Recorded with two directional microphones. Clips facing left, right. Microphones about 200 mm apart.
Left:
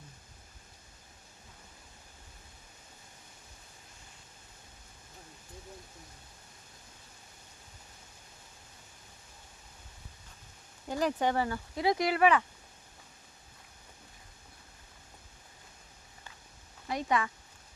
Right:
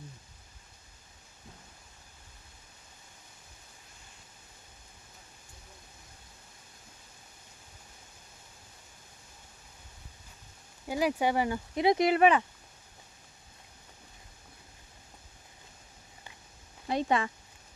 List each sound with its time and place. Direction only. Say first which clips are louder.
10.8 s speech: right 2 dB; 10° right (ahead or behind)
16.9 s speech: right 3 dB; 30° right (ahead or behind)